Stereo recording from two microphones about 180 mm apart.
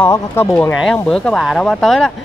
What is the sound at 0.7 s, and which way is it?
Speech, centre (ahead or behind).